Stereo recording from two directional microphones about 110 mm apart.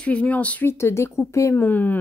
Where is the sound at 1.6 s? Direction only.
15° left (ahead or behind).